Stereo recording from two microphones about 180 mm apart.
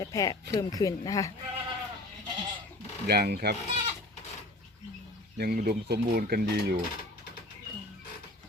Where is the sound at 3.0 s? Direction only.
60° right (ahead or behind).